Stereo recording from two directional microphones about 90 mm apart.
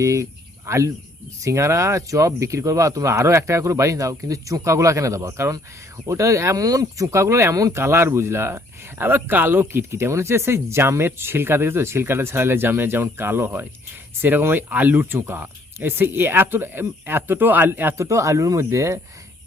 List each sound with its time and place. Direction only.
0.0 s speech: 35° right (ahead or behind)
18.0 s speech: 35° right (ahead or behind)